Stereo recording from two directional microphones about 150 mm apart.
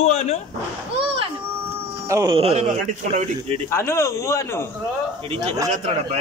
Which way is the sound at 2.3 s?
45° right (ahead or behind).